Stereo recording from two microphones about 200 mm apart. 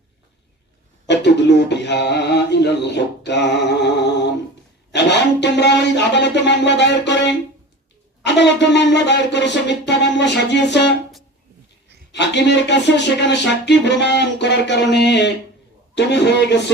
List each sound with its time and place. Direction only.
1.0 s mantra: 60° left (ahead or behind)
4.9 s music: 60° left (ahead or behind)
12.1 s music: 60° left (ahead or behind)